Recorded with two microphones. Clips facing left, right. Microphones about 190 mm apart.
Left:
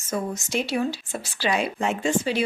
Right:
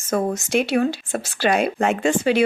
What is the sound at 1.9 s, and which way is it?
Speech, 75° right (ahead or behind).